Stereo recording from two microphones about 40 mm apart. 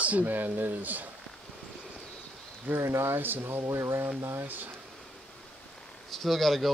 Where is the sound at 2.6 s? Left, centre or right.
Right.